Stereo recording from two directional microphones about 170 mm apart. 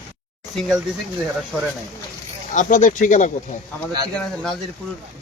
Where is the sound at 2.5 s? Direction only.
45° left (ahead or behind).